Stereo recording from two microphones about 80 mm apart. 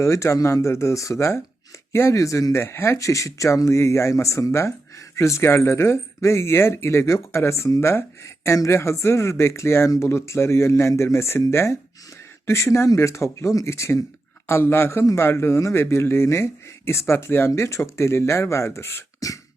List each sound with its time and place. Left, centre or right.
0.0 s speech: left